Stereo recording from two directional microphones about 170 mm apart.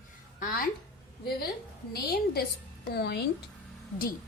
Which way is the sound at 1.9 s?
65° left (ahead or behind).